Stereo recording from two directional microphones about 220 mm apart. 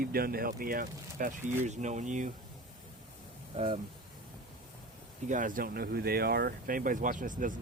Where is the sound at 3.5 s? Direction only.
30° right (ahead or behind).